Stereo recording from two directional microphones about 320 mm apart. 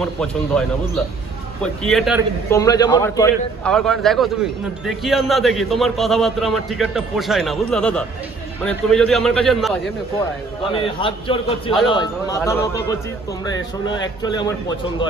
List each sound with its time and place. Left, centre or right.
0.0 s a man's voice: centre
2.5 s a man's voice: centre
10.7 s a man's voice: centre